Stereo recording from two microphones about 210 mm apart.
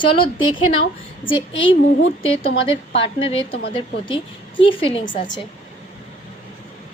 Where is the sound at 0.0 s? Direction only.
25° left (ahead or behind).